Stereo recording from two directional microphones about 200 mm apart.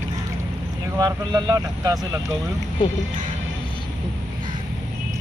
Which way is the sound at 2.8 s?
25° left (ahead or behind).